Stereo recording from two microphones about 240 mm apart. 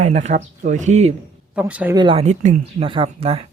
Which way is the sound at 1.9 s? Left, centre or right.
Centre.